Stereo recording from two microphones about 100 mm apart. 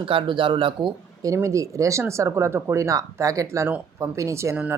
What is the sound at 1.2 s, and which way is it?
Speech, 30° right (ahead or behind).